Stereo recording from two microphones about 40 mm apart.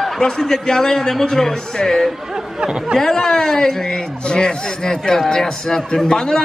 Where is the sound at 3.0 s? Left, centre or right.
Centre.